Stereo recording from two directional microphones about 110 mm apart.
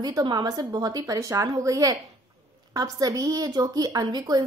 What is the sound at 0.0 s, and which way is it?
Speech, 35° right (ahead or behind).